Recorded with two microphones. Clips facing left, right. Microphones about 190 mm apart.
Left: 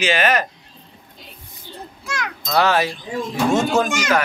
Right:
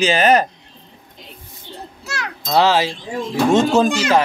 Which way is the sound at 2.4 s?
25° right (ahead or behind).